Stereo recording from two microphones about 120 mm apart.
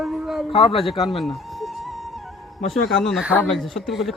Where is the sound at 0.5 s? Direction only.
50° left (ahead or behind).